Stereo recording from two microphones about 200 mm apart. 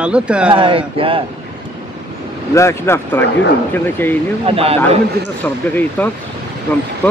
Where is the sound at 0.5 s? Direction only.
25° right (ahead or behind).